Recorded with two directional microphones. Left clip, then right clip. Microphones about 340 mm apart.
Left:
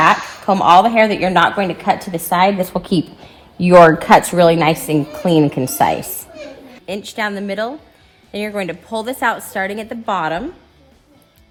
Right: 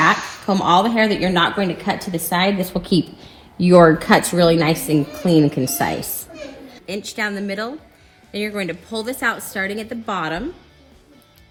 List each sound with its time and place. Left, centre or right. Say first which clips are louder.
0.0 s a woman's voice: left 4 dB; left
8.9 s a woman's voice: left 4 dB; centre